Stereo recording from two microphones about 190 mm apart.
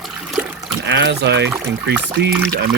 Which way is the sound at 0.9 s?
70° right (ahead or behind).